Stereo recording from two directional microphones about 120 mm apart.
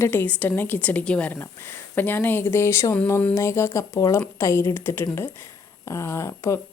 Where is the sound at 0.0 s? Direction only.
15° left (ahead or behind).